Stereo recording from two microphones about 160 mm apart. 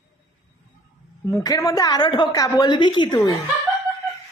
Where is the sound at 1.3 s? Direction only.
20° left (ahead or behind).